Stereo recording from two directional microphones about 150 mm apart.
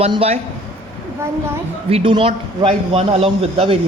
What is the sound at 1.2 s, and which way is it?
Speech, 15° right (ahead or behind).